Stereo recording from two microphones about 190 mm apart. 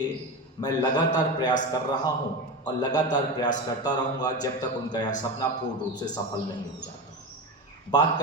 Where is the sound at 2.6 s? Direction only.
20° left (ahead or behind).